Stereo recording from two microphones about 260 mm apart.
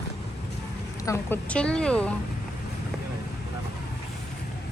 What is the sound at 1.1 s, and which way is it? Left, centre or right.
Speech, centre.